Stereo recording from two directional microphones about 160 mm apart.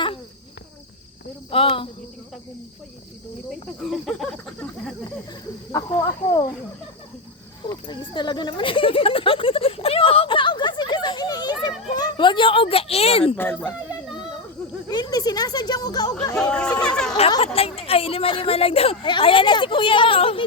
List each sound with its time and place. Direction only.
1.5 s speech: 35° left (ahead or behind)
3.5 s cricket: centre (ahead or behind)
5.7 s speech: 20° left (ahead or behind)
7.7 s a sound: 30° left (ahead or behind)
11.9 s speech: 25° left (ahead or behind)
13.3 s speech: 10° left (ahead or behind)
14.1 s a sound: 5° right (ahead or behind)
14.8 s speech: 25° left (ahead or behind)
16.4 s cricket: 5° left (ahead or behind)
17.4 s speech: 35° left (ahead or behind)